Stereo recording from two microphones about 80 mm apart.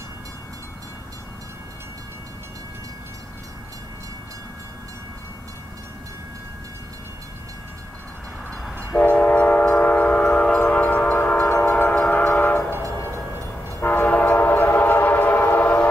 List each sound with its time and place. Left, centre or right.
8.5 s train: centre
13.7 s train: left